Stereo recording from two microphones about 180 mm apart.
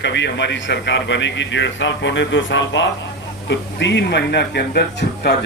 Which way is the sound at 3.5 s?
80° left.